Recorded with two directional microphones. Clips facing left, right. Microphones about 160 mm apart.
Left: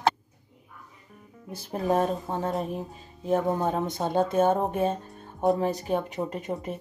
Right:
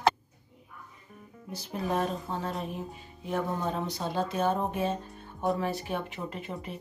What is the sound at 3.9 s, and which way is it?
Speech, 50° left (ahead or behind).